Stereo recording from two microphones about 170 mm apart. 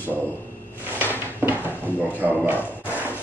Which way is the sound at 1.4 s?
10° right (ahead or behind).